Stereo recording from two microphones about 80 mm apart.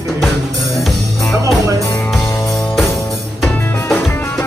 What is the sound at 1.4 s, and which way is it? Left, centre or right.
Music, right.